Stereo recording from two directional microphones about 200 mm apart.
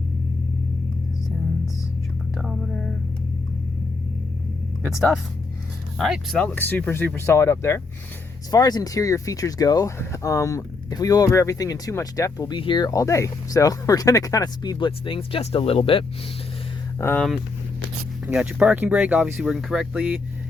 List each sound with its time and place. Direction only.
2.3 s whispering: centre (ahead or behind)
4.9 s speech: centre (ahead or behind); by 16.0 s 25° left (ahead or behind)
17.0 s speech: 10° left (ahead or behind)
18.3 s speech: 5° right (ahead or behind)